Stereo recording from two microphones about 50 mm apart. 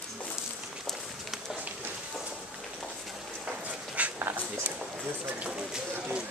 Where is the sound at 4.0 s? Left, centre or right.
Right.